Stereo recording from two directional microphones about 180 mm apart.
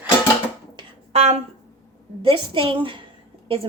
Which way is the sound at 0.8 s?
35° right (ahead or behind).